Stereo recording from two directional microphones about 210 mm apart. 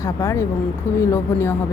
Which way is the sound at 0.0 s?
15° left (ahead or behind).